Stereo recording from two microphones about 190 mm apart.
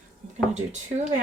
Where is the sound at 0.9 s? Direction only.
45° right (ahead or behind).